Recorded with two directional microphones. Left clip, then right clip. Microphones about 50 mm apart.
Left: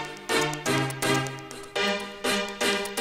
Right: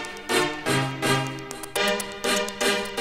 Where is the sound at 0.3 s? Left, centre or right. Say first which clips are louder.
Right 2 dB; left.